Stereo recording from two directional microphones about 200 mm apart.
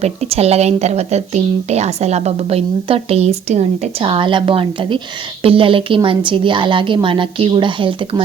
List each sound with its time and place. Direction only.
0.0 s a woman's voice: 30° right (ahead or behind)